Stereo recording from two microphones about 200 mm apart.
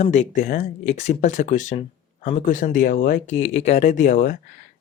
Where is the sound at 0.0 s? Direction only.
35° left (ahead or behind).